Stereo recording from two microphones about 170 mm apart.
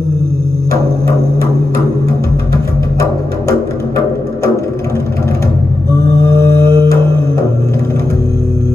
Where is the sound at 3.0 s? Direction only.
20° left (ahead or behind).